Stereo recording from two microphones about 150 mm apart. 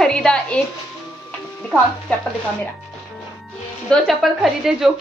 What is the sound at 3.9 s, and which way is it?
A woman's voice, centre (ahead or behind).